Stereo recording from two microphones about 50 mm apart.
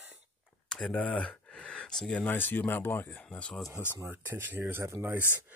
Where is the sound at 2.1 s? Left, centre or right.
Left.